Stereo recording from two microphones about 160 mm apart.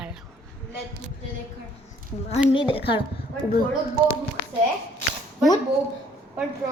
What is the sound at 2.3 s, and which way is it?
Speech, 35° left (ahead or behind).